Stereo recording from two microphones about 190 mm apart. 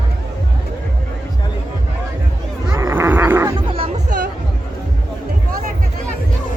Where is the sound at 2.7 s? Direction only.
15° right (ahead or behind).